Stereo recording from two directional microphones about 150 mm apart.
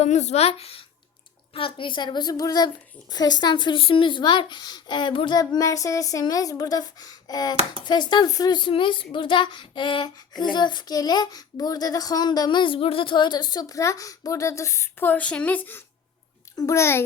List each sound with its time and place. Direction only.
0.0 s a woman's voice: 50° left (ahead or behind); by 17.0 s 20° left (ahead or behind)